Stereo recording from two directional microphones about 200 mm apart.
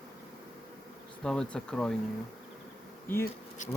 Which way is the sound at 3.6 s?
35° left (ahead or behind).